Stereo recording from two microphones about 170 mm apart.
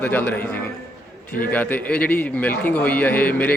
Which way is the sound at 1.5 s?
10° left (ahead or behind).